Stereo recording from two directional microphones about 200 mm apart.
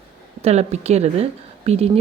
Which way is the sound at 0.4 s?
35° right (ahead or behind).